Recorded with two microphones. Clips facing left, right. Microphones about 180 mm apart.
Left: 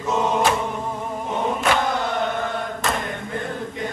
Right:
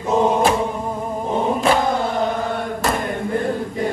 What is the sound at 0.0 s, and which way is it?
Chant, 35° right (ahead or behind).